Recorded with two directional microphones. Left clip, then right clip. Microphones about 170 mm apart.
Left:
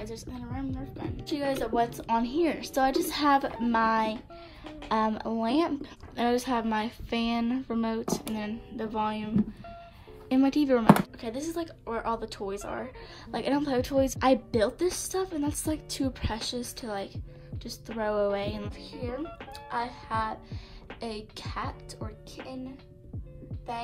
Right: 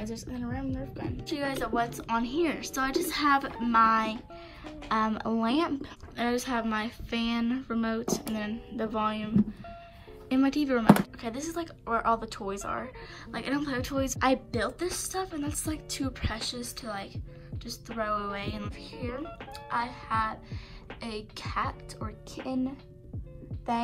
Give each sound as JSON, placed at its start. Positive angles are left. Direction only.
{"t": 0.0, "sound": "a woman's voice", "side_deg": 10}
{"t": 14.1, "sound": "a woman's voice", "side_deg": 30}